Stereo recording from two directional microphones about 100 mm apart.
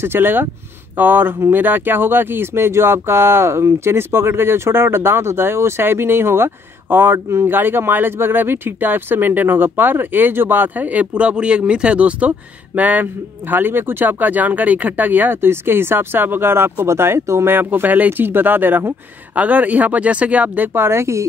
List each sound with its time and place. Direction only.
0.0 s speech: 20° right (ahead or behind)